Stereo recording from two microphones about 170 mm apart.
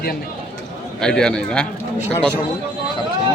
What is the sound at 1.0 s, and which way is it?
Speech, 5° left (ahead or behind).